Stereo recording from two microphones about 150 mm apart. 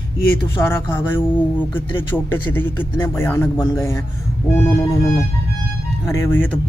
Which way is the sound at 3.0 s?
15° left (ahead or behind).